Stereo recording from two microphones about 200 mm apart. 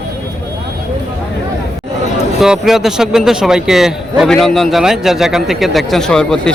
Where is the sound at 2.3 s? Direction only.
Centre (ahead or behind).